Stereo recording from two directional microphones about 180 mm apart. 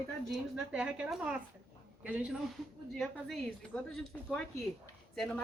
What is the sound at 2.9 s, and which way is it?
A woman's voice, 5° left (ahead or behind).